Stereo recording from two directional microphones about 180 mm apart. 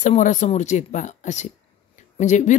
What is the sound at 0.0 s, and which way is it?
Speech, 45° left (ahead or behind).